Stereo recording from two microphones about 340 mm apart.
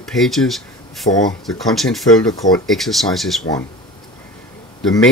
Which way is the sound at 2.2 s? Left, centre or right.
Centre.